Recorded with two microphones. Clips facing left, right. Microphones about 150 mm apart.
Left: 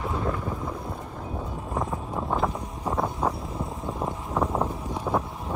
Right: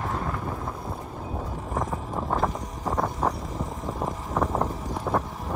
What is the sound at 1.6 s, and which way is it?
Boat, centre (ahead or behind).